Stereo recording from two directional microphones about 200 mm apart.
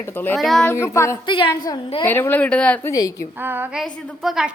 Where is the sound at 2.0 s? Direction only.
10° left (ahead or behind).